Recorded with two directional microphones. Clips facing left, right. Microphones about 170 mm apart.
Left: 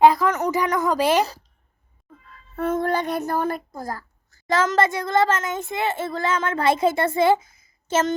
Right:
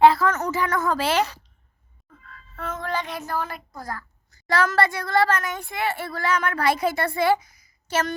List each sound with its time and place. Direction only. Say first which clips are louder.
0.0 s a woman's voice: left 1 dB; 15° left (ahead or behind)
2.6 s music: left 7 dB; 55° left (ahead or behind)
3.2 s a child's voice: left 5 dB; 50° left (ahead or behind)
4.4 s speech: left 2 dB; 20° left (ahead or behind)